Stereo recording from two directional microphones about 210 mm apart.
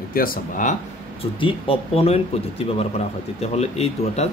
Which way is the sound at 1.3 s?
25° left (ahead or behind).